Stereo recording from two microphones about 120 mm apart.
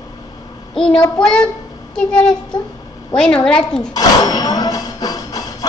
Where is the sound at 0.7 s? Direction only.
5° left (ahead or behind).